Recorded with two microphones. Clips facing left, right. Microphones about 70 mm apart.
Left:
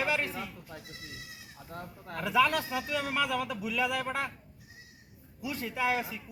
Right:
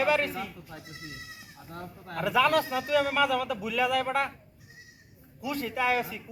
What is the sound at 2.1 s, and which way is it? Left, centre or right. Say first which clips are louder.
A man's voice: right 3 dB; right.